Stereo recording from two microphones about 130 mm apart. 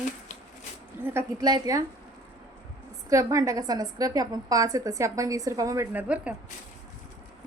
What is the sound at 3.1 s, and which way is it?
A woman's voice, 25° right (ahead or behind).